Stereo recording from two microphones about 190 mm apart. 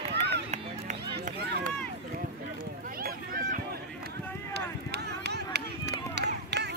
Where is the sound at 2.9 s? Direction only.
50° right (ahead or behind).